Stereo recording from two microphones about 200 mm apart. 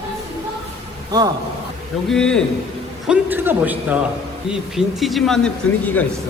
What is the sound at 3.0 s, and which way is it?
A man's voice, 10° right (ahead or behind).